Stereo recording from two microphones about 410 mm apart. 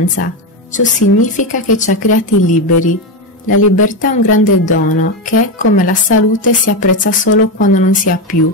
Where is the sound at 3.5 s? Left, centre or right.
Left.